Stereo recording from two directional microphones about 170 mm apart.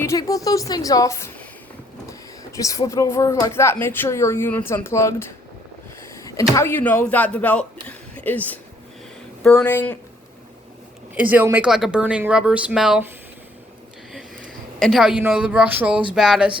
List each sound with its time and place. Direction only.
0.0 s a woman's voice: 20° left (ahead or behind)
11.1 s speech: 10° right (ahead or behind)
14.8 s speech: centre (ahead or behind)
16.1 s a sound: centre (ahead or behind)